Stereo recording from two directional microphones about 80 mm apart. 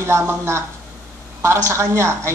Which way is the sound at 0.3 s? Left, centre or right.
Right.